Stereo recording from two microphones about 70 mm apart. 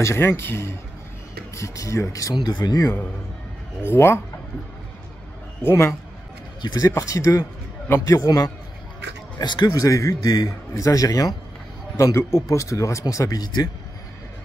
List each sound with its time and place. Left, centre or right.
0.0 s a man's voice: left
1.5 s a man's voice: left
2.4 s speech: left
3.8 s a man's voice: left
5.6 s a man's voice: left
6.6 s speech: left
7.0 s a man's voice: left
9.4 s a man's voice: left
12.0 s a man's voice: left
13.4 s speech: left